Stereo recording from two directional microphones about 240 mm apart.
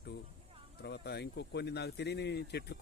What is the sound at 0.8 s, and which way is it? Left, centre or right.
Speech, left.